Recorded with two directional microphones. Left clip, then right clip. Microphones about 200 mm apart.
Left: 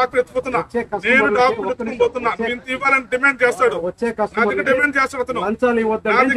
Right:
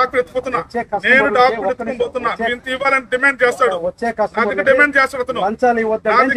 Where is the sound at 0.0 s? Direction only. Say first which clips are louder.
Right 1 dB; 15° left (ahead or behind).